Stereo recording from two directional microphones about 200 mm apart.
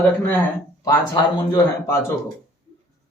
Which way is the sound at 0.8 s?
20° left (ahead or behind).